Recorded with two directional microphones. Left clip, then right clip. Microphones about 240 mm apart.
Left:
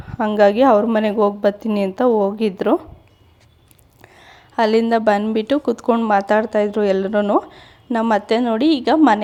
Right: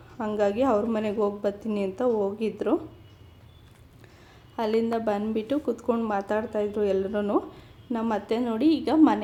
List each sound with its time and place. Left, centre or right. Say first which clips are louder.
0.2 s a woman's voice: left 11 dB; left
4.0 s a woman's voice: left 10 dB; left